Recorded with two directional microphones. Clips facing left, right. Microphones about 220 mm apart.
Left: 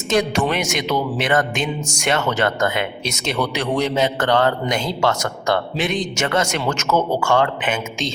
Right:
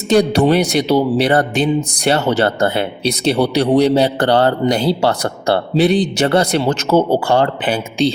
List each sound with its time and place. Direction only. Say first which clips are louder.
0.1 s a man's voice: right 7 dB; 35° right (ahead or behind)